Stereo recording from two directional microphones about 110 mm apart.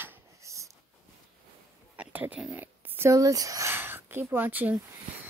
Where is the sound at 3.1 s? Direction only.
30° right (ahead or behind).